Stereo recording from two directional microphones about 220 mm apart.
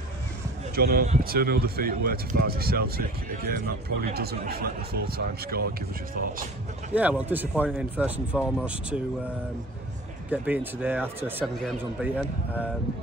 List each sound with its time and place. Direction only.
0.7 s speech: 45° right (ahead or behind)
6.9 s a man's voice: 5° right (ahead or behind)
10.3 s a man's voice: 5° right (ahead or behind)